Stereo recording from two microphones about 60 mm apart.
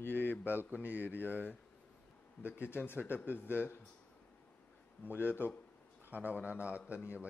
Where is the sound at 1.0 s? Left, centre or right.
Left.